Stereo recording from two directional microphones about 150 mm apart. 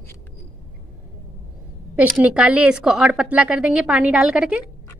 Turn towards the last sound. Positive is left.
turn(degrees=-5)  # may be behind; listen again after turning